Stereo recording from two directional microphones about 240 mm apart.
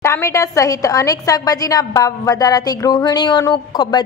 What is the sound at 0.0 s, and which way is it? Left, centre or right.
A woman's voice, centre.